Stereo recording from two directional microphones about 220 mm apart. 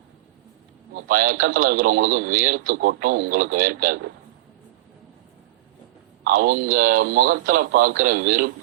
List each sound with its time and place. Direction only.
0.9 s speech: 40° right (ahead or behind)
6.2 s speech: 40° right (ahead or behind)